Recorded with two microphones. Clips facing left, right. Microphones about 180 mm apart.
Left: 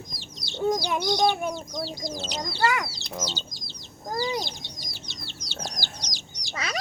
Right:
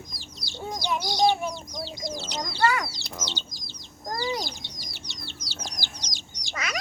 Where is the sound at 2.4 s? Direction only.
20° left (ahead or behind).